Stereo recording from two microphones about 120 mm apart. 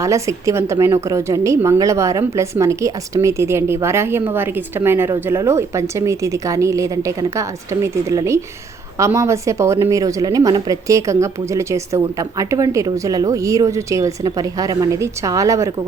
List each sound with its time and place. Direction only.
0.0 s a woman's voice: 25° right (ahead or behind)